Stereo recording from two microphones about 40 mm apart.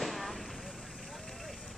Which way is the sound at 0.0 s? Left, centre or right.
Centre.